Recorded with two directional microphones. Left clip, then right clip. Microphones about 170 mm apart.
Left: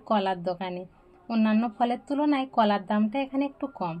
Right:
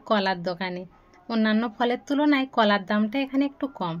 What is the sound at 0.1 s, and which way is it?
A woman's voice, 45° right (ahead or behind).